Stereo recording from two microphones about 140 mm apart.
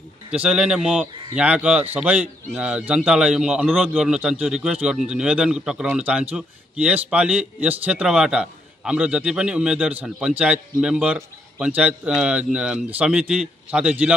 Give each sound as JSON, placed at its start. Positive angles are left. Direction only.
{"t": 0.3, "sound": "a man's voice", "side_deg": -5}